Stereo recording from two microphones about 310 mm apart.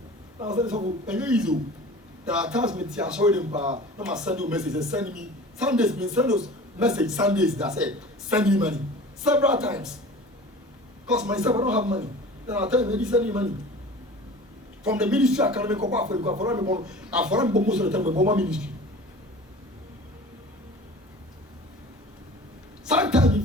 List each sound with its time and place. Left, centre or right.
0.3 s speech: centre
1.0 s a man's voice: centre
11.1 s a man's voice: centre
13.0 s a man's voice: centre
14.8 s a man's voice: centre
18.0 s speech: right
18.3 s a man's voice: centre
22.9 s a sound: centre